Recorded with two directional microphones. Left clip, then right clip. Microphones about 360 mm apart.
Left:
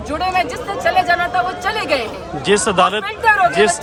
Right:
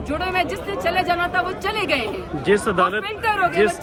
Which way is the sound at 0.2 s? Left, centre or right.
Centre.